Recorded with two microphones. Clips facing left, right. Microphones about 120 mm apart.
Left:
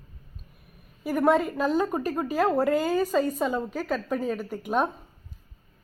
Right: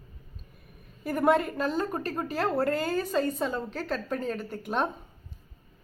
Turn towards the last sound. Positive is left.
turn(degrees=5)  # may be behind; listen again after turning